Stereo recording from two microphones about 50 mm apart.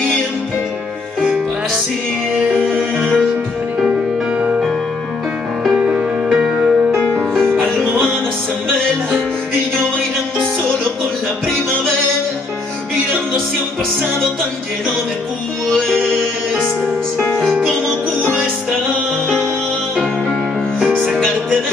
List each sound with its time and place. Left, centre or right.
2.5 s music: centre
5.9 s music: centre
15.9 s music: centre
20.8 s music: centre